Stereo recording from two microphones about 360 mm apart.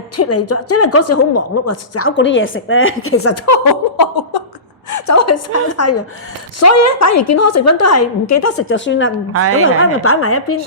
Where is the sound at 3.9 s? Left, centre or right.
Left.